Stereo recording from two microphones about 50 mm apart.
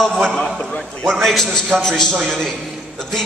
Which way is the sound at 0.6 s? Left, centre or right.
Centre.